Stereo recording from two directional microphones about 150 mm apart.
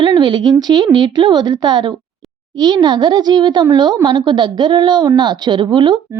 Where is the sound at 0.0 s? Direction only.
30° right (ahead or behind).